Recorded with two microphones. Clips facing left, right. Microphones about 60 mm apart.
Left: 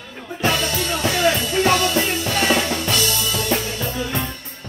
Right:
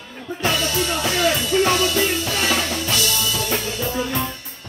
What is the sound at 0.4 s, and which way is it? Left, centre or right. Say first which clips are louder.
Music: left 1 dB; left.